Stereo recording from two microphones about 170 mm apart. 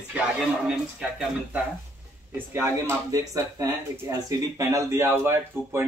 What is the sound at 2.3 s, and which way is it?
A man's voice, 15° right (ahead or behind).